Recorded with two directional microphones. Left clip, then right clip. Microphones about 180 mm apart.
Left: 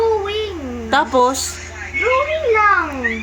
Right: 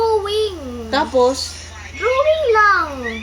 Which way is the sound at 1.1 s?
65° left (ahead or behind).